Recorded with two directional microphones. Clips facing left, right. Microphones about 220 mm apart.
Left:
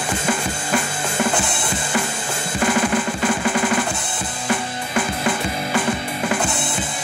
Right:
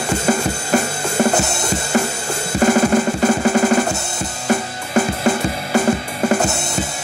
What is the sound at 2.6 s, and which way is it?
Drum, 40° right (ahead or behind).